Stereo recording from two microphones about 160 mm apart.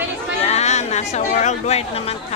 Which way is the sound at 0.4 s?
45° left (ahead or behind).